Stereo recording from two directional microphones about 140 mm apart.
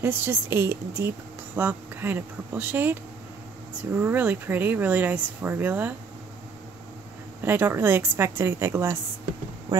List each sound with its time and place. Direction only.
0.0 s speech: 15° right (ahead or behind)
7.4 s speech: 15° right (ahead or behind)
9.7 s a sound: 25° right (ahead or behind)